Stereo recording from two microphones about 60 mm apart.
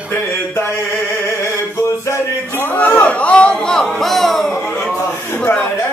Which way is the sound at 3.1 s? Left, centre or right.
Centre.